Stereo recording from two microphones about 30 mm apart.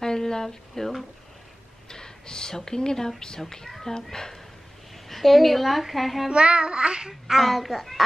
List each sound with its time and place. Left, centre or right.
0.0 s a sound: left
1.9 s a child's voice: left
4.9 s speech: centre
6.2 s child singing: right
7.1 s a child's voice: centre
7.4 s a child's voice: centre